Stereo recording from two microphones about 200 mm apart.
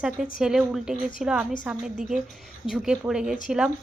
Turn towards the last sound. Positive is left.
turn(degrees=-5)  # may be behind; listen again after turning